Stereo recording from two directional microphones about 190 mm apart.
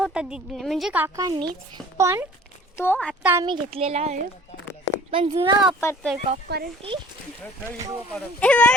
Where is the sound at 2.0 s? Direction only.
15° right (ahead or behind).